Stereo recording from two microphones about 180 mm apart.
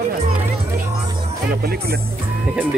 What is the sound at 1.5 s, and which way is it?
Speech, 60° right (ahead or behind).